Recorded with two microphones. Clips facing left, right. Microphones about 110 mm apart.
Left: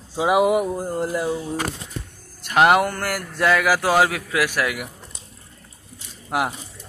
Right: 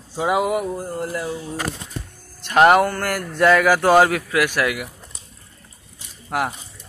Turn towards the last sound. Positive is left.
turn(degrees=10)  # may be behind; listen again after turning